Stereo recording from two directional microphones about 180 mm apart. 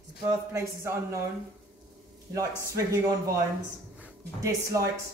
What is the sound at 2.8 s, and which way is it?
Speech, 15° right (ahead or behind).